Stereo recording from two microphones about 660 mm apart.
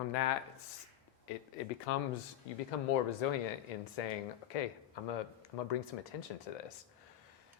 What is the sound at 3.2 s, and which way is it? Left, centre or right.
Speech, left.